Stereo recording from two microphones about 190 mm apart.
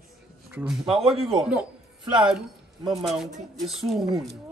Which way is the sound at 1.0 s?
30° right (ahead or behind).